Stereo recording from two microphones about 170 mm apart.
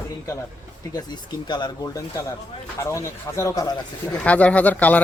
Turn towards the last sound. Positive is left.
turn(degrees=10)  # may be behind; listen again after turning